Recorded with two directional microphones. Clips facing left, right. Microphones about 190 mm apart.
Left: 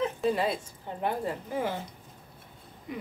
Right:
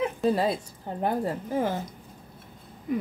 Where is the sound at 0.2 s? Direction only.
40° right (ahead or behind).